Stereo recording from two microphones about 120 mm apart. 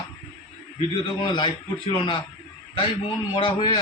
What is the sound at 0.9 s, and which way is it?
A man's voice, 45° left (ahead or behind).